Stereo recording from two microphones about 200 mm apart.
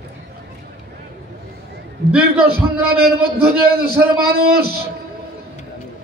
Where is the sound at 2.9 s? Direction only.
50° right (ahead or behind).